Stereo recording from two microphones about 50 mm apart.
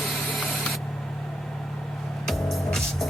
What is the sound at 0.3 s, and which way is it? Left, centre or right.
Mechanisms, centre.